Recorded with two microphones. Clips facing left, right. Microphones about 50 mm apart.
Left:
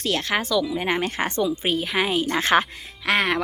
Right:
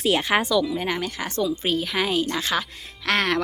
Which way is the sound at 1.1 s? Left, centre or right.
Left.